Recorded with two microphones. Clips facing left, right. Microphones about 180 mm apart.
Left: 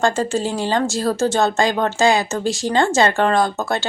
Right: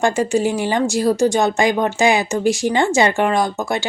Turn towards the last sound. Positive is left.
turn(degrees=-15)  # may be behind; listen again after turning